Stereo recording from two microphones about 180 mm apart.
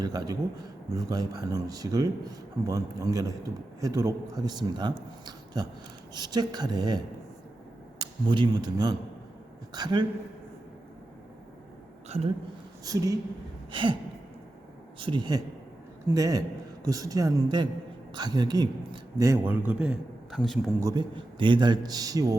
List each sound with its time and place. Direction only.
0.0 s a man's voice: 20° right (ahead or behind)
12.0 s a woman's voice: 35° right (ahead or behind)
12.8 s speech: 20° right (ahead or behind)
13.7 s gasp: 25° right (ahead or behind)
14.9 s speech: 25° right (ahead or behind); by 20.6 s centre (ahead or behind)
20.8 s speech: 25° right (ahead or behind)